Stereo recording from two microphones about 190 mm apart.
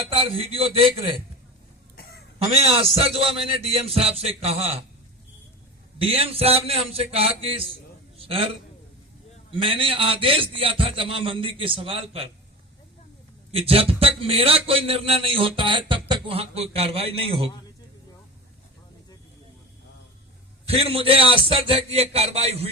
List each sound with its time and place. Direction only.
0.1 s a man's voice: 30° right (ahead or behind)
2.0 s a sound: 55° left (ahead or behind)
2.5 s a man's voice: 35° right (ahead or behind)
6.0 s a man's voice: 30° right (ahead or behind)
13.5 s a man's voice: 30° right (ahead or behind)
20.7 s a man's voice: 30° right (ahead or behind)